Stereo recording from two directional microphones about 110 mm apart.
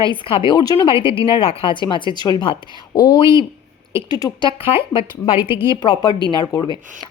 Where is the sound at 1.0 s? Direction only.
55° left (ahead or behind).